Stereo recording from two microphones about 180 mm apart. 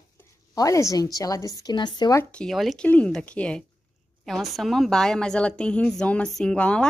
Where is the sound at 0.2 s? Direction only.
15° left (ahead or behind).